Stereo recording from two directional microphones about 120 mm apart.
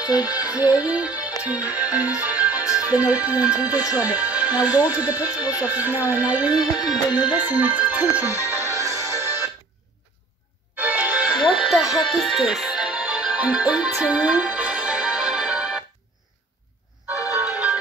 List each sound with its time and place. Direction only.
0.0 s speech: 10° right (ahead or behind)
1.4 s music: 10° right (ahead or behind)
2.8 s speech: 15° right (ahead or behind)
7.1 s music: 35° left (ahead or behind)
7.3 s music: 15° right (ahead or behind)
10.8 s music: 15° right (ahead or behind)